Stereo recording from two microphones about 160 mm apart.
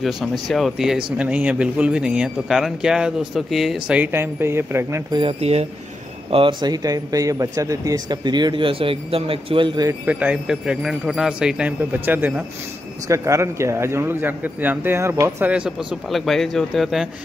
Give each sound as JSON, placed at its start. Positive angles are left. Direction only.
{"t": 0.0, "sound": "speech", "side_deg": 0}
{"t": 5.1, "sound": "speech", "side_deg": -35}
{"t": 6.3, "sound": "speech", "side_deg": -30}
{"t": 10.0, "sound": "speech", "side_deg": -10}